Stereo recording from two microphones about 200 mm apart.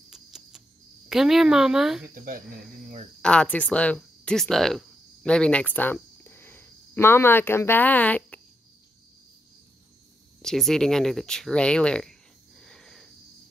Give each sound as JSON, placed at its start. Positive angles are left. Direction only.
{"t": 0.1, "sound": "cricket", "side_deg": -5}
{"t": 1.0, "sound": "speech", "side_deg": 0}
{"t": 2.1, "sound": "speech", "side_deg": -45}
{"t": 3.2, "sound": "speech", "side_deg": 5}
{"t": 10.4, "sound": "speech", "side_deg": 0}